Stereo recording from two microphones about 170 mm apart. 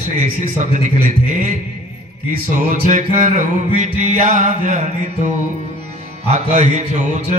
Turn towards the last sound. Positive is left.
turn(degrees=-40)  # may be behind; listen again after turning